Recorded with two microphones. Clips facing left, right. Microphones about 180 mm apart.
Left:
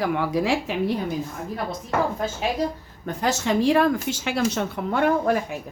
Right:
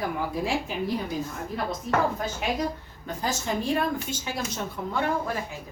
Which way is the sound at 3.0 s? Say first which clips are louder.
Left 6 dB; 75° left (ahead or behind).